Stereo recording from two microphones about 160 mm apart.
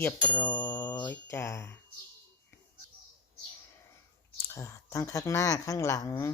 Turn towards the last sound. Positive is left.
turn(degrees=20)  # may be behind; listen again after turning